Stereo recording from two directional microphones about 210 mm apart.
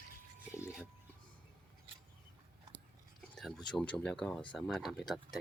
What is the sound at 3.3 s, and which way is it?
Speech, centre (ahead or behind).